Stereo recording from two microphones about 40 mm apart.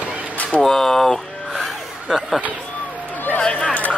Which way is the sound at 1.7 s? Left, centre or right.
Centre.